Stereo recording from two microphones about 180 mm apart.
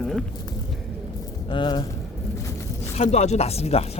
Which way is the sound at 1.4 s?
25° left (ahead or behind).